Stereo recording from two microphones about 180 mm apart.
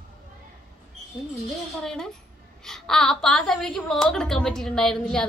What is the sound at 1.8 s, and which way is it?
A woman's voice, 5° left (ahead or behind).